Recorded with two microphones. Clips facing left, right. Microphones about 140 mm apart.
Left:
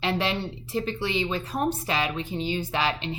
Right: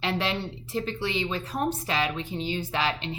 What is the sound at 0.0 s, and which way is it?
Speech, 15° left (ahead or behind).